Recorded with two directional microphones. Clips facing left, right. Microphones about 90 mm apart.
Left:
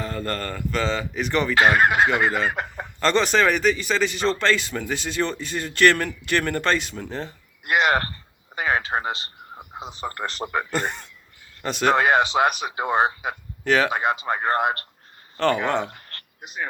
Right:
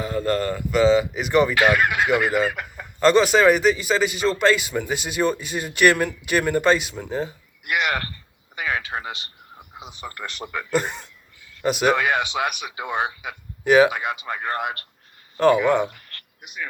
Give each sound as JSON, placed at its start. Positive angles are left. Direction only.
{"t": 0.0, "sound": "speech", "side_deg": -5}
{"t": 1.5, "sound": "speech", "side_deg": 35}
{"t": 2.5, "sound": "chicken", "side_deg": 30}
{"t": 3.0, "sound": "speech", "side_deg": -10}
{"t": 7.6, "sound": "speech", "side_deg": 35}
{"t": 10.7, "sound": "speech", "side_deg": -5}
{"t": 11.9, "sound": "speech", "side_deg": 35}
{"t": 13.7, "sound": "speech", "side_deg": -10}
{"t": 13.9, "sound": "speech", "side_deg": 35}
{"t": 15.4, "sound": "speech", "side_deg": -10}
{"t": 15.9, "sound": "a sound", "side_deg": 35}